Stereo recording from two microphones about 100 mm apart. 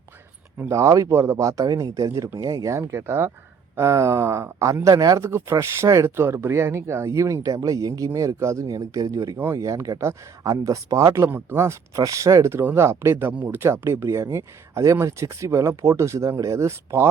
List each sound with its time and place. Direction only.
0.7 s speech: 30° right (ahead or behind)